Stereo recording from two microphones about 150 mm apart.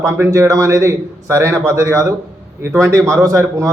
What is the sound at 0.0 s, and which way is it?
A man's voice, 20° right (ahead or behind).